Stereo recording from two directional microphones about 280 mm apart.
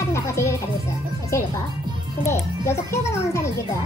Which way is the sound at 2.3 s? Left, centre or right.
Centre.